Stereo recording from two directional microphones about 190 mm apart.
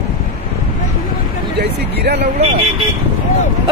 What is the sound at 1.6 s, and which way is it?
Speech, 60° right (ahead or behind).